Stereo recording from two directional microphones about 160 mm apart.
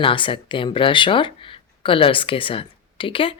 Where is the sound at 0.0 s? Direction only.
30° left (ahead or behind).